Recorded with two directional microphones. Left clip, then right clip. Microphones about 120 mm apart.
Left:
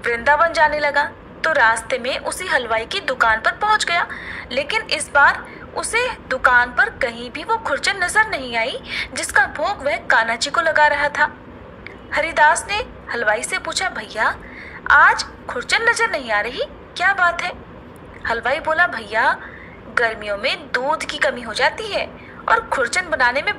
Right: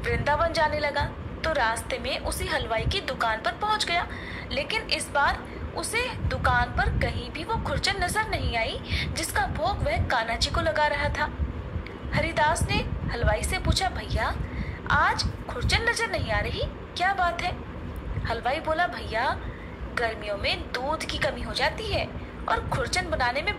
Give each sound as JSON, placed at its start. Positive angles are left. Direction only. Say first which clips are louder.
{"t": 0.0, "sound": "a woman's voice", "louder": "left 9 dB", "side_deg": 40}